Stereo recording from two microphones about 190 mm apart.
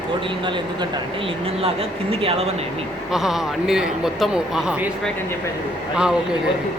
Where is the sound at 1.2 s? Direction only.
30° right (ahead or behind).